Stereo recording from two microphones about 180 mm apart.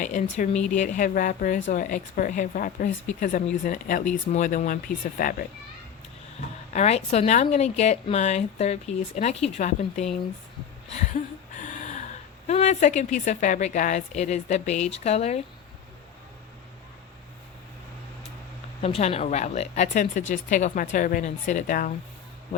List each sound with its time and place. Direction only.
0.0 s speech: 45° left (ahead or behind)
6.7 s speech: 35° left (ahead or behind)
10.9 s a sound: 40° left (ahead or behind)
12.5 s speech: 40° left (ahead or behind)
18.8 s speech: 35° left (ahead or behind)